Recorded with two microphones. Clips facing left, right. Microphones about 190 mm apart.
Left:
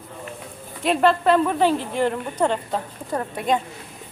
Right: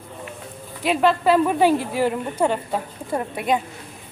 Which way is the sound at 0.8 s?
Centre (ahead or behind).